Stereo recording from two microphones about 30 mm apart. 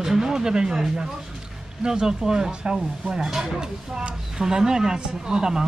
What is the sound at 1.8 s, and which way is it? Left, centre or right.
Speech, right.